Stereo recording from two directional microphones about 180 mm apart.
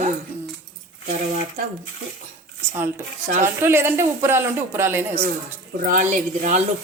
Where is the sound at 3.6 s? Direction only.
15° right (ahead or behind).